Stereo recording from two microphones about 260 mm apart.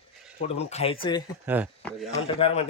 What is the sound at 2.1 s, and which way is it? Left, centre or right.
Speech, left.